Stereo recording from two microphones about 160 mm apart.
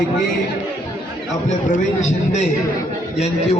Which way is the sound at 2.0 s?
45° left (ahead or behind).